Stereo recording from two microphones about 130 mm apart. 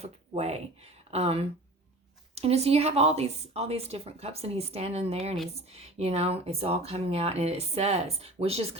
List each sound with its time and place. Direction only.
0.0 s a woman's voice: 55° right (ahead or behind)